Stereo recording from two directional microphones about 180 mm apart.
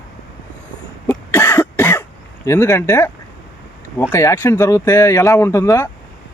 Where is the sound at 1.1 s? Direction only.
15° left (ahead or behind).